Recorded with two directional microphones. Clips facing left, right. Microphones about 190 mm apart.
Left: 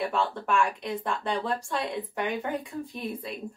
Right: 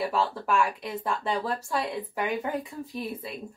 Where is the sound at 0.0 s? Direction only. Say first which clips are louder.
Right 1 dB; 5° right (ahead or behind).